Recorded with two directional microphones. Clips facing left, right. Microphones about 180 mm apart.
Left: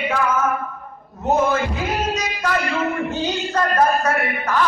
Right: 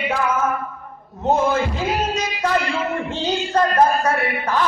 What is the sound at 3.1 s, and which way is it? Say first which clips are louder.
Speech: right 1 dB; 30° right (ahead or behind).